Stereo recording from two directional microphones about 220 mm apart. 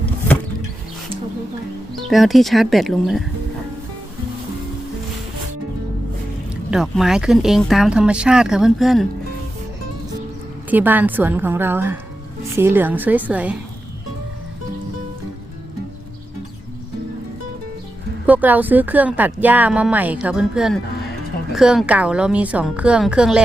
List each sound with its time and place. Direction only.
2.0 s speech: centre (ahead or behind)
6.5 s speech: 5° right (ahead or behind)
10.7 s speech: 10° right (ahead or behind)
18.3 s speech: 5° right (ahead or behind)